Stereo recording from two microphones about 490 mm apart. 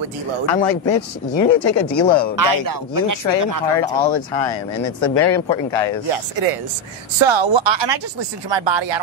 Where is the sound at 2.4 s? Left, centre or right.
Right.